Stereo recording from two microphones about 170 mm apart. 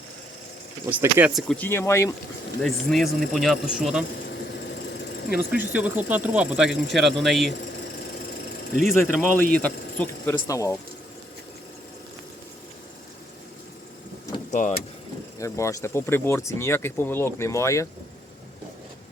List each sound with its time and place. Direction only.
0.9 s speech: 10° right (ahead or behind)
1.3 s speech: centre (ahead or behind)
1.5 s speech: 15° left (ahead or behind)
2.6 s speech: centre (ahead or behind)
5.3 s speech: 5° right (ahead or behind)
8.8 s speech: centre (ahead or behind); by 10.8 s 20° left (ahead or behind)
15.4 s speech: 15° left (ahead or behind)